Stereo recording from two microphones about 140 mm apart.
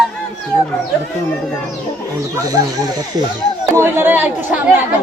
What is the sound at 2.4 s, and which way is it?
A man's voice, 25° right (ahead or behind).